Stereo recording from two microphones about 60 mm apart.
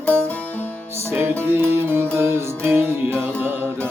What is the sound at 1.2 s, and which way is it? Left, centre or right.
Music, right.